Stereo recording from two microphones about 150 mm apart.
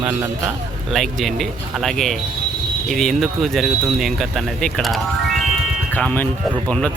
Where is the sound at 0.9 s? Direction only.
Centre (ahead or behind).